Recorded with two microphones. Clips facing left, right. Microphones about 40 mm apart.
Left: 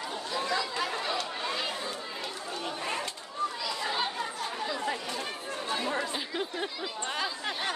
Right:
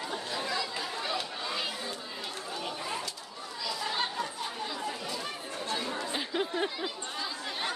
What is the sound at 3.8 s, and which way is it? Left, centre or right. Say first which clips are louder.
Chatter: left 1 dB; centre.